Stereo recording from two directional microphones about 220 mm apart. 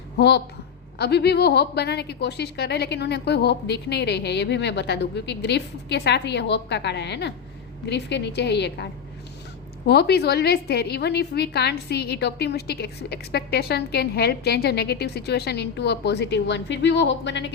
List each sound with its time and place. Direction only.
0.2 s a woman's voice: 50° left (ahead or behind)